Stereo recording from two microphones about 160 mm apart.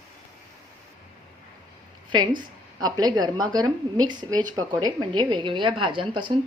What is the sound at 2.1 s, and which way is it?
A woman's voice, 30° right (ahead or behind).